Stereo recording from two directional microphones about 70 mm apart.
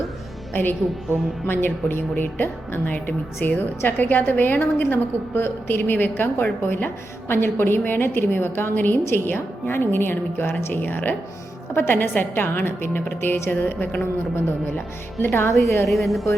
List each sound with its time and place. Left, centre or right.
0.5 s a woman's voice: left
15.2 s a woman's voice: left
15.9 s a woman's voice: centre